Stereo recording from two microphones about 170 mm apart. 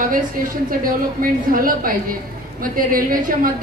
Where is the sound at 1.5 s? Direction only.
55° right (ahead or behind).